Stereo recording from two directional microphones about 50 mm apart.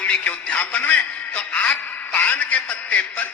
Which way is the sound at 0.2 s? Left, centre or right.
Left.